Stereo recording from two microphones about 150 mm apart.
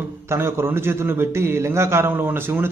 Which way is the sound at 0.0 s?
15° right (ahead or behind).